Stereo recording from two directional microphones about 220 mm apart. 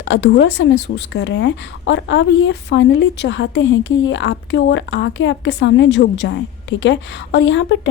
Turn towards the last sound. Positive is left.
turn(degrees=55)  # may be behind; listen again after turning